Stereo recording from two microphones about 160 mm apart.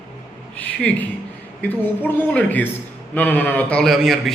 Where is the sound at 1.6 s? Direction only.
10° left (ahead or behind).